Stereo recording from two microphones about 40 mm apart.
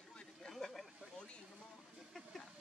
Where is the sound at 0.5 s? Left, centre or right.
Centre.